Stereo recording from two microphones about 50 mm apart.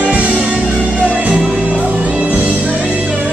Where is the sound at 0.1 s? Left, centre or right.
Right.